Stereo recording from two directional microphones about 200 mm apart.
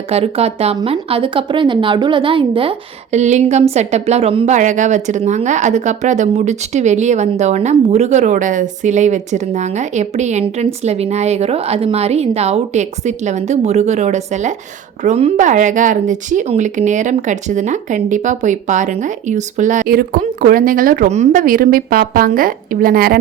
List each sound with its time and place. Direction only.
0.1 s a woman's voice: 30° right (ahead or behind); by 23.2 s 50° right (ahead or behind)